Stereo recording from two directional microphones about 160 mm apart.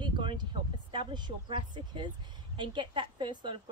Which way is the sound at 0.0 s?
30° right (ahead or behind).